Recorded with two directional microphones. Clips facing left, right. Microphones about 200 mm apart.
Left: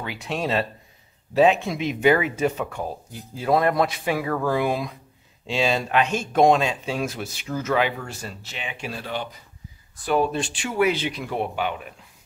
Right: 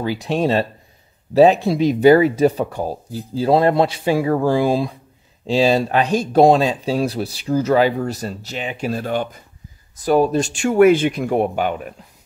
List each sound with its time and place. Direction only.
0.0 s speech: 35° right (ahead or behind)